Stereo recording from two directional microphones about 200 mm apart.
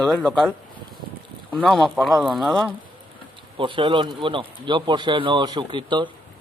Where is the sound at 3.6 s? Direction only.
25° right (ahead or behind).